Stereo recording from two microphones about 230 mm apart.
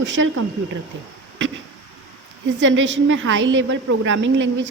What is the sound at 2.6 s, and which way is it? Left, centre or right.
A woman's voice, right.